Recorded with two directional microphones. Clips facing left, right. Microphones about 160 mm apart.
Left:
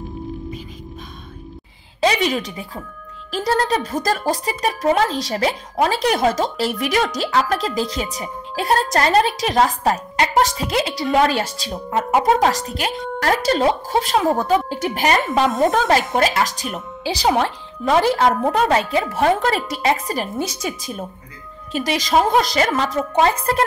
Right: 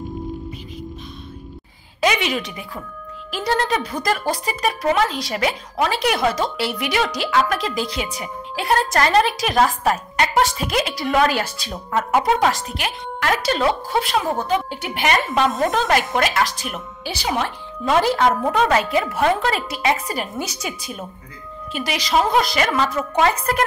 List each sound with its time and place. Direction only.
2.0 s a woman's voice: 35° left (ahead or behind)
12.3 s speech: 35° left (ahead or behind)
21.7 s speech: 40° left (ahead or behind)